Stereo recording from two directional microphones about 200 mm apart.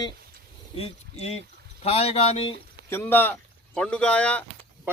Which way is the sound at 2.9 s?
10° left (ahead or behind).